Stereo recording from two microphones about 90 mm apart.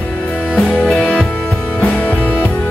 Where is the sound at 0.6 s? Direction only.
10° left (ahead or behind).